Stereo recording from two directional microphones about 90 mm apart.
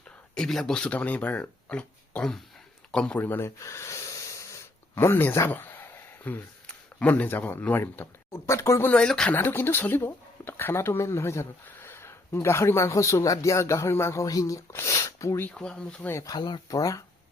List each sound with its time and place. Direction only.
0.3 s speech: 5° left (ahead or behind); by 3.5 s 20° left (ahead or behind)
3.6 s speech: 30° left (ahead or behind)
8.9 s speech: 10° left (ahead or behind)
9.3 s speech: 25° left (ahead or behind)
15.4 s speech: 10° left (ahead or behind)
16.2 s speech: 50° left (ahead or behind)